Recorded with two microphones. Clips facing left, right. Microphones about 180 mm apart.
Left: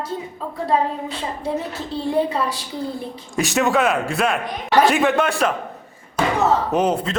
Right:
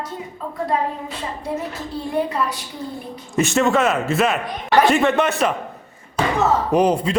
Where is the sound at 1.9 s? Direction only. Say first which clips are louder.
Left 3 dB; 30° left (ahead or behind).